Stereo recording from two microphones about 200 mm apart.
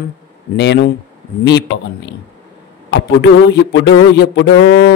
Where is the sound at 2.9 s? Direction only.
65° left (ahead or behind).